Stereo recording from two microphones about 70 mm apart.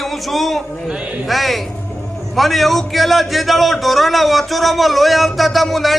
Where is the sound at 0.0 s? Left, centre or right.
Centre.